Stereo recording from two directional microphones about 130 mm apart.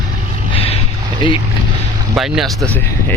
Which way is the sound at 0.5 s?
50° left (ahead or behind).